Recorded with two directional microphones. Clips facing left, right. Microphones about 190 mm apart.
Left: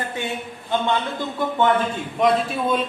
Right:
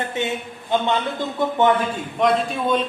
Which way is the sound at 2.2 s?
Centre (ahead or behind).